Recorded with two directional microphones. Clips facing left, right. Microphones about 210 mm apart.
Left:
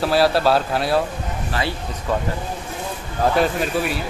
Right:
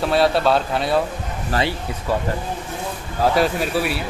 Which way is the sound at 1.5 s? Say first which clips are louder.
Right 3 dB; 40° right (ahead or behind).